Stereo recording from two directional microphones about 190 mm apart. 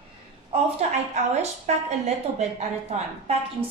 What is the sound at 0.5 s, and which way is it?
A woman's voice, 35° right (ahead or behind).